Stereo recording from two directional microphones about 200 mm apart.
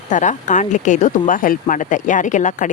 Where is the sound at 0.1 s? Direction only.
40° left (ahead or behind).